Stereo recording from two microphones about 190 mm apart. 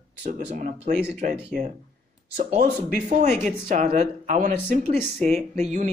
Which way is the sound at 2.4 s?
45° right (ahead or behind).